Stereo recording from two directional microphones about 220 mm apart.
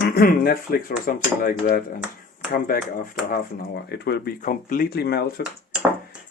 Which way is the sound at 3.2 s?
45° left (ahead or behind).